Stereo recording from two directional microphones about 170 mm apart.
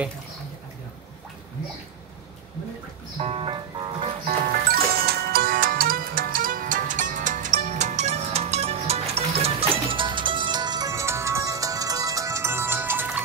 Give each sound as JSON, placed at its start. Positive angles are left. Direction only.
{"t": 3.2, "sound": "music", "side_deg": -35}
{"t": 5.0, "sound": "music", "side_deg": -65}